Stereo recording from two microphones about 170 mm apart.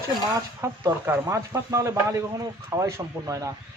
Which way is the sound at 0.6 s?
15° right (ahead or behind).